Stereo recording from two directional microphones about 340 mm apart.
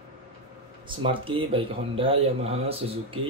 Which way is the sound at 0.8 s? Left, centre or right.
Centre.